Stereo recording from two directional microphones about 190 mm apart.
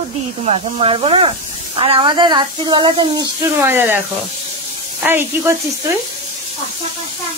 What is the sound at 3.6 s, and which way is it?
Speech, 10° right (ahead or behind).